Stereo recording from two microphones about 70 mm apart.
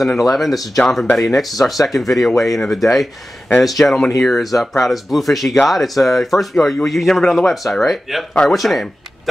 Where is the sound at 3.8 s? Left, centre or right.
Left.